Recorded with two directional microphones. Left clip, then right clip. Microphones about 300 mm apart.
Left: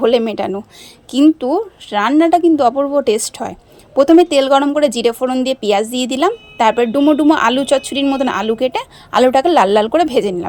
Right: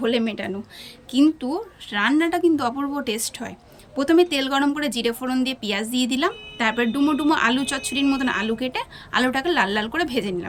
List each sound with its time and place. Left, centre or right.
0.0 s a woman's voice: centre